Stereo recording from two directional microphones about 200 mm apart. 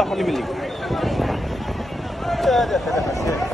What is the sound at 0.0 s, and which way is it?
Speech, centre (ahead or behind).